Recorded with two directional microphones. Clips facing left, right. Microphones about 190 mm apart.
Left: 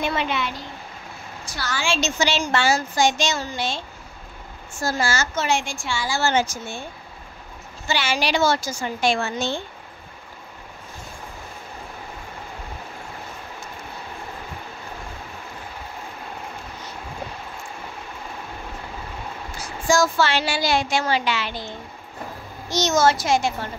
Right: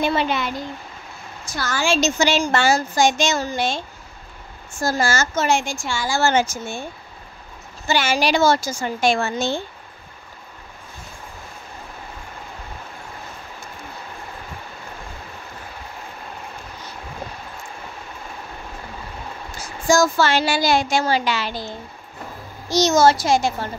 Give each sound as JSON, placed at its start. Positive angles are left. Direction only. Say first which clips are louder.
{"t": 0.0, "sound": "a child's voice", "louder": "right 4 dB", "side_deg": -35}
{"t": 4.8, "sound": "a woman's voice", "louder": "right 3 dB", "side_deg": -45}
{"t": 7.9, "sound": "a woman's voice", "louder": "right 4 dB", "side_deg": -45}
{"t": 19.9, "sound": "a woman's voice", "louder": "right 3 dB", "side_deg": -45}